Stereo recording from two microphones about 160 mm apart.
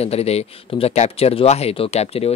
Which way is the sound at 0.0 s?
40° left (ahead or behind).